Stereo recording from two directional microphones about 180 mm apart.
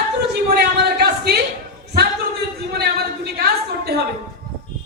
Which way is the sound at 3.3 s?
60° right (ahead or behind).